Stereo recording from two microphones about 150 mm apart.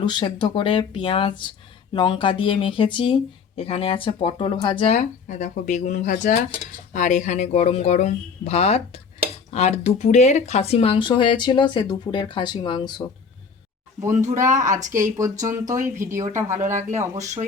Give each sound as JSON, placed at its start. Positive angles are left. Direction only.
{"t": 0.0, "sound": "speech", "side_deg": 30}
{"t": 4.9, "sound": "speech", "side_deg": 55}
{"t": 14.2, "sound": "speech", "side_deg": -55}
{"t": 14.9, "sound": "speech", "side_deg": -20}